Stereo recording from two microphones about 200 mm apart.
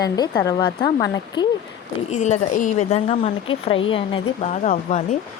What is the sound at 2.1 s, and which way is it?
Speech, 35° left (ahead or behind).